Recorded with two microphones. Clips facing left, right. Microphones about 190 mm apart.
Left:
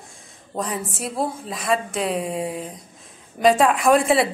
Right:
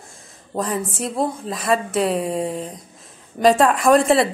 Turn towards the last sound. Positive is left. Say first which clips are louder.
# right 2 dB
turn(degrees=0)  # may be behind; listen again after turning